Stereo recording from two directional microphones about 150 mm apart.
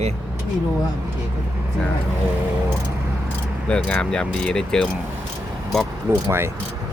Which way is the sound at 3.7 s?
5° left (ahead or behind).